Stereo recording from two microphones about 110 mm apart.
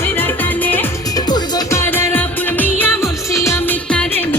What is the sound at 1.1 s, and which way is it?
Music, 35° left (ahead or behind).